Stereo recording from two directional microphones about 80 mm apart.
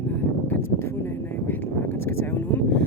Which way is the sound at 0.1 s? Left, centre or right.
Left.